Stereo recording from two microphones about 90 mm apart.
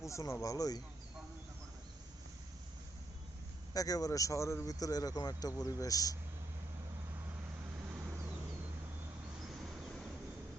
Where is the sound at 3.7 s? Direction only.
45° left (ahead or behind).